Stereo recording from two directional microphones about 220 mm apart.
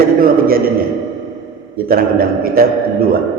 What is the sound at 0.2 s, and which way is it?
Speech, 40° right (ahead or behind).